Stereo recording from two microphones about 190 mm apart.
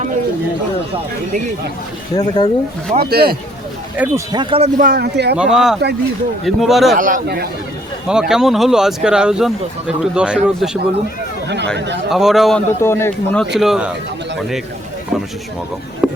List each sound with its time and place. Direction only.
2.1 s speech: 20° left (ahead or behind)
3.0 s speech: 55° right (ahead or behind)
3.9 s speech: 10° right (ahead or behind)
4.3 s speech: 25° right (ahead or behind)
4.8 s speech: 55° right (ahead or behind)
5.4 s speech: centre (ahead or behind)
6.9 s a man's voice: 45° right (ahead or behind)
8.3 s speech: centre (ahead or behind)
11.4 s speech: 65° right (ahead or behind)
12.1 s speech: centre (ahead or behind)
12.8 s a man's voice: 15° left (ahead or behind); by 13.9 s 5° right (ahead or behind)
16.0 s a sound: 5° right (ahead or behind)